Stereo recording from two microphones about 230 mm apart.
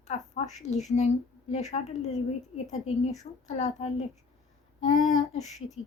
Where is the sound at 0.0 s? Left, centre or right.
Left.